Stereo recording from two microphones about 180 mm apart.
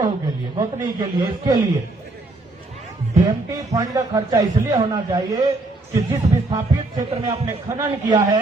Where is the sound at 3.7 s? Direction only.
20° right (ahead or behind).